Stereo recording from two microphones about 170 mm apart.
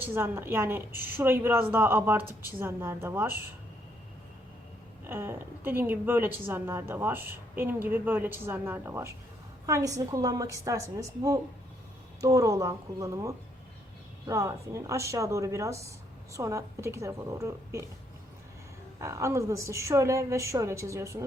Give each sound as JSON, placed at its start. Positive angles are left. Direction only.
{"t": 0.0, "sound": "a woman's voice", "side_deg": -15}
{"t": 5.0, "sound": "a woman's voice", "side_deg": -15}
{"t": 18.9, "sound": "a woman's voice", "side_deg": -15}